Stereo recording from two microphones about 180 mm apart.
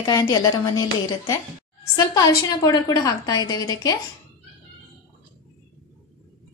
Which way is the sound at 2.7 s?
20° left (ahead or behind).